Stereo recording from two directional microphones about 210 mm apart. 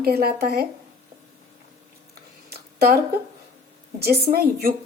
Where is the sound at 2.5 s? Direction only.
50° right (ahead or behind).